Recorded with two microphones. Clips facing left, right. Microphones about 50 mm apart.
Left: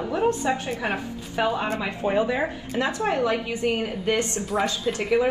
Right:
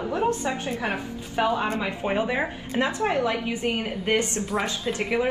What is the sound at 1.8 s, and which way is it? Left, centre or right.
A woman's voice, right.